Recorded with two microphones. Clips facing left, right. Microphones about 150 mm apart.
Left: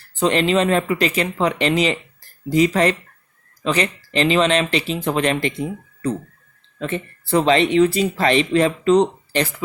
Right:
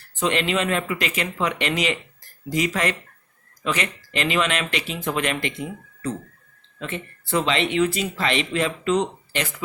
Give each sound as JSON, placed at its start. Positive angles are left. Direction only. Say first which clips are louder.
{"t": 0.2, "sound": "speech", "louder": "left 6 dB", "side_deg": 35}